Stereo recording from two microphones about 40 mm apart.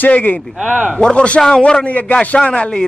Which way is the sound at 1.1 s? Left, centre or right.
Left.